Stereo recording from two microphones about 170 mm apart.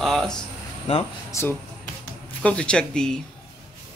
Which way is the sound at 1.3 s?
15° left (ahead or behind).